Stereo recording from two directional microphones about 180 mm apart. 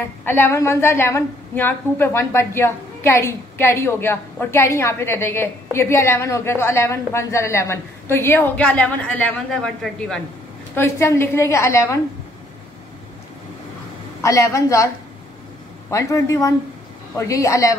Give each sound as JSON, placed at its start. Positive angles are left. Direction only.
{"t": 0.0, "sound": "a woman's voice", "side_deg": 10}
{"t": 14.2, "sound": "a woman's voice", "side_deg": 15}
{"t": 15.9, "sound": "a woman's voice", "side_deg": 15}